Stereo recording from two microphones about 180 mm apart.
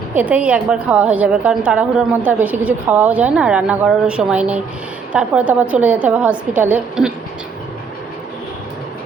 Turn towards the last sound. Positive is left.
turn(degrees=-5)  # may be behind; listen again after turning